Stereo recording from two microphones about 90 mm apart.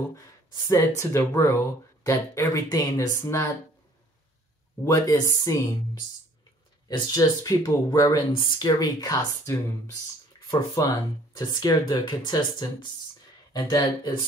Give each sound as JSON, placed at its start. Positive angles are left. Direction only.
{"t": 0.7, "sound": "speech", "side_deg": 35}
{"t": 4.8, "sound": "speech", "side_deg": 40}
{"t": 6.9, "sound": "speech", "side_deg": 45}
{"t": 10.8, "sound": "speech", "side_deg": 45}